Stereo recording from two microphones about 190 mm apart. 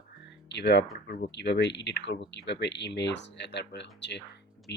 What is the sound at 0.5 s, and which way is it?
Speech, 65° left (ahead or behind).